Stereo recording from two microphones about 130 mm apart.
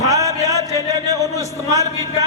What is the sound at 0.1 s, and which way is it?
Music, 25° right (ahead or behind).